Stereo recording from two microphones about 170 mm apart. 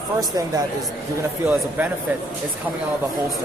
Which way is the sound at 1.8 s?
10° right (ahead or behind).